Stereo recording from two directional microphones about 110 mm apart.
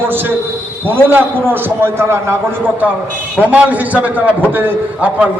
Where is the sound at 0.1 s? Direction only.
20° right (ahead or behind).